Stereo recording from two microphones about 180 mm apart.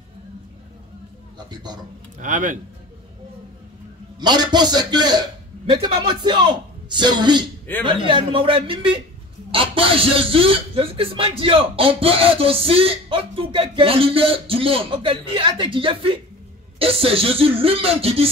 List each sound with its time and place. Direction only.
1.5 s speech: 25° right (ahead or behind)
2.1 s speech: 45° right (ahead or behind)
4.2 s speech: 25° right (ahead or behind)